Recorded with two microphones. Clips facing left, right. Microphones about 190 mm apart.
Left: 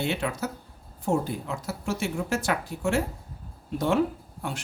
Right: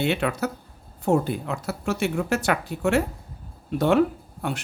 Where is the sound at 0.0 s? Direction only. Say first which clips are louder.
Right 4 dB; 65° right (ahead or behind).